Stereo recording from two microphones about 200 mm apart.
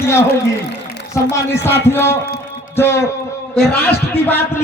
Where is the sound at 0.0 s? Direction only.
15° left (ahead or behind).